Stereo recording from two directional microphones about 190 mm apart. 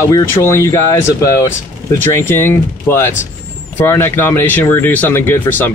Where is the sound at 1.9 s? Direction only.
10° left (ahead or behind).